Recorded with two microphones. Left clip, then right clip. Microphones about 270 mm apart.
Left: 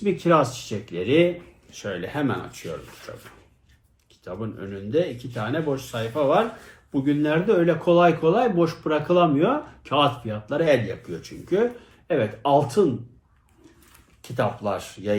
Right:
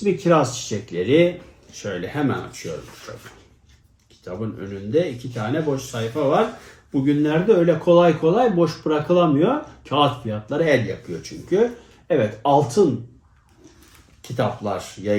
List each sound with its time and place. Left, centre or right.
0.0 s speech: centre
4.2 s speech: centre
14.3 s speech: centre